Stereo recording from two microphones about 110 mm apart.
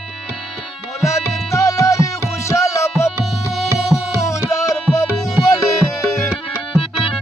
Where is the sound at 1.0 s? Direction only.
25° left (ahead or behind).